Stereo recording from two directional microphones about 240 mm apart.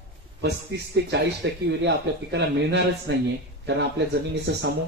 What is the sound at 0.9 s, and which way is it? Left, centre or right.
Speech, right.